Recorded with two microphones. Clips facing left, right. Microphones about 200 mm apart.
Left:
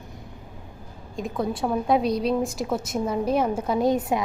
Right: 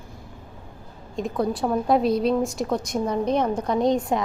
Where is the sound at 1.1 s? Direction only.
Centre (ahead or behind).